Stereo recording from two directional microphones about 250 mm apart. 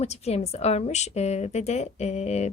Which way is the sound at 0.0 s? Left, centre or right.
Left.